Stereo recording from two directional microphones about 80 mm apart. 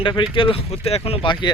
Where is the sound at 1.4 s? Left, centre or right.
Left.